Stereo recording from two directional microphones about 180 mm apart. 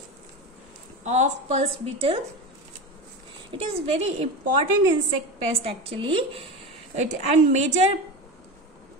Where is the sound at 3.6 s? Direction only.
35° right (ahead or behind).